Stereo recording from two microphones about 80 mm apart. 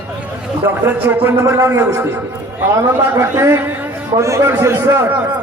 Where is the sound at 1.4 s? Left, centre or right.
Right.